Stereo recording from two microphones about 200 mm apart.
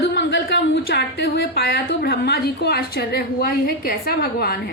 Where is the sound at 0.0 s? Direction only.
60° left (ahead or behind).